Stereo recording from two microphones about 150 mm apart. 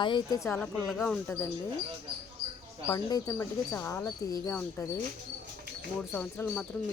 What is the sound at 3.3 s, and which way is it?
Speech, 15° left (ahead or behind).